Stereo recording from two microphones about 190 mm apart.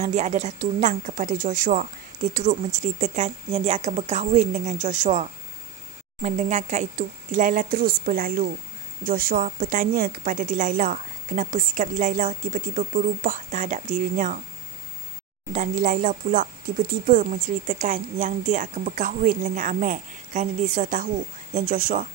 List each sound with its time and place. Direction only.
0.0 s a woman's voice: 40° right (ahead or behind)
15.5 s a woman's voice: 40° right (ahead or behind)